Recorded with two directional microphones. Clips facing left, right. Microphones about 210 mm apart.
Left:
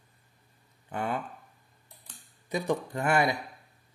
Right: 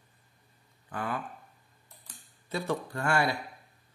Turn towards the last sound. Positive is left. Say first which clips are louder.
# left 2 dB
turn(degrees=20)  # may be behind; listen again after turning